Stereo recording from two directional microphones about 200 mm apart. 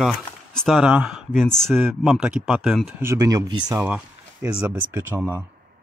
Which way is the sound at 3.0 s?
15° right (ahead or behind).